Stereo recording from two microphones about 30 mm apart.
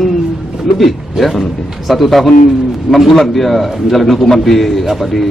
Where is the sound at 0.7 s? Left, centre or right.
Centre.